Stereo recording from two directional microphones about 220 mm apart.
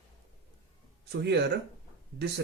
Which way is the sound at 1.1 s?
50° right (ahead or behind).